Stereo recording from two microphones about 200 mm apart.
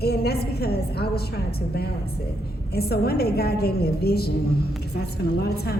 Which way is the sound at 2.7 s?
50° left (ahead or behind).